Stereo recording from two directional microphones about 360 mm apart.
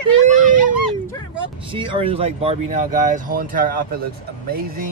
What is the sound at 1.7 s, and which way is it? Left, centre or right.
Speech, centre.